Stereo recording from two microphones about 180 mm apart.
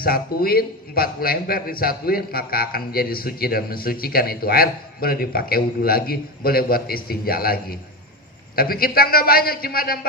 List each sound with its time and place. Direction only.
0.0 s a man's voice: 55° left (ahead or behind)